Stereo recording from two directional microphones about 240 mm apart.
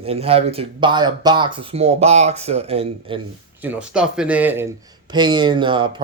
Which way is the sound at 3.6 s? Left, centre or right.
Centre.